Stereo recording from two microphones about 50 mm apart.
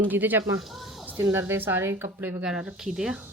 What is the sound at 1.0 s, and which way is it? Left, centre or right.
Music, right.